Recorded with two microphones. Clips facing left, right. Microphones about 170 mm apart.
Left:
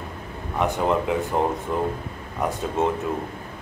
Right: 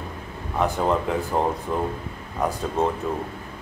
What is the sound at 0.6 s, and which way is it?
Speech, centre (ahead or behind).